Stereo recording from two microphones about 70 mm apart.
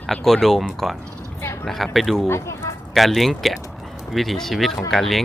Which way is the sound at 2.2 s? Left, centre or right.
Left.